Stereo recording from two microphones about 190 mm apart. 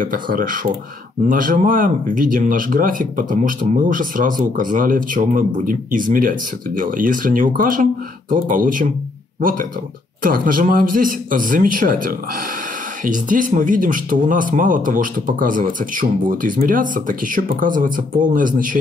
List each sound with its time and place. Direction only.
0.0 s speech: 45° right (ahead or behind)